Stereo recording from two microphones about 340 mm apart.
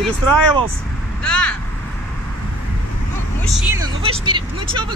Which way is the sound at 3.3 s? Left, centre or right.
Centre.